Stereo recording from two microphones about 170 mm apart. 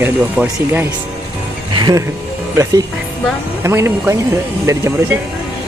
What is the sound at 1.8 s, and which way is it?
Speech, 25° right (ahead or behind).